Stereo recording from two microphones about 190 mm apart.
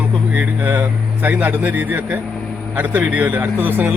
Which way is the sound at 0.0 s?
10° right (ahead or behind).